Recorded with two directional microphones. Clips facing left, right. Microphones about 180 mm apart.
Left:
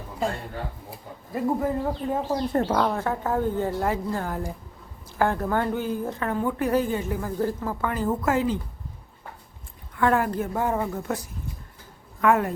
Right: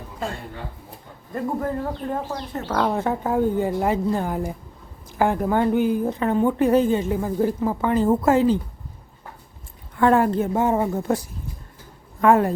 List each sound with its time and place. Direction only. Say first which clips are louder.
0.9 s speech: left 1 dB; 5° left (ahead or behind)
2.6 s speech: left 7 dB; 55° left (ahead or behind)
2.9 s a woman's voice: right 3 dB; 20° right (ahead or behind)
10.0 s a woman's voice: right 5 dB; 30° right (ahead or behind)
12.2 s a woman's voice: right 4 dB; 30° right (ahead or behind)